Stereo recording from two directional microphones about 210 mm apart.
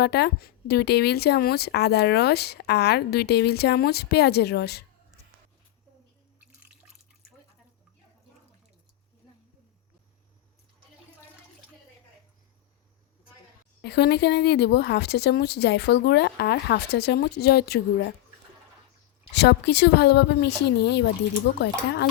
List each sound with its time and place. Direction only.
0.0 s a woman's voice: 50° left (ahead or behind)
6.5 s drip: 5° right (ahead or behind)
13.8 s a woman's voice: 50° left (ahead or behind)
19.3 s a woman's voice: 55° left (ahead or behind)